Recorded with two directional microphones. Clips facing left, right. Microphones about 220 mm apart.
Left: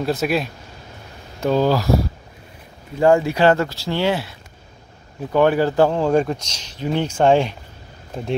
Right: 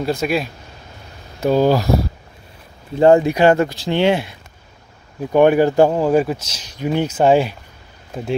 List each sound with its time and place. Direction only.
0.0 s speech: centre (ahead or behind)
1.4 s speech: 10° right (ahead or behind)
3.0 s speech: 20° right (ahead or behind)
5.3 s speech: 15° right (ahead or behind)